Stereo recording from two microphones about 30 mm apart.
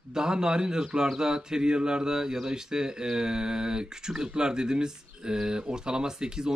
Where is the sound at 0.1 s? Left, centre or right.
Right.